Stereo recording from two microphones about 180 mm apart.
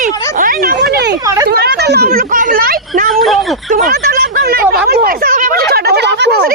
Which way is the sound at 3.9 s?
55° right (ahead or behind).